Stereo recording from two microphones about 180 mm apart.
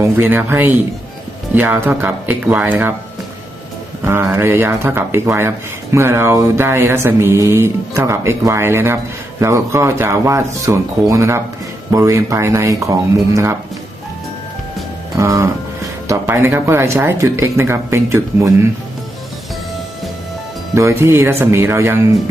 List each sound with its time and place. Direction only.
0.0 s speech: 10° right (ahead or behind)
4.0 s speech: 15° right (ahead or behind)
15.1 s moo: 15° right (ahead or behind)
16.0 s speech: 15° right (ahead or behind)
20.7 s speech: 15° right (ahead or behind)